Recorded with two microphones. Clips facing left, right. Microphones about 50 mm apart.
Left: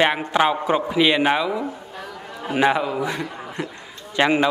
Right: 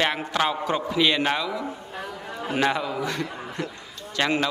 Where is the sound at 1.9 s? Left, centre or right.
Centre.